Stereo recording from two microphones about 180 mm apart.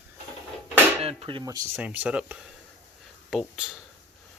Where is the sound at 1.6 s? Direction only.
10° right (ahead or behind).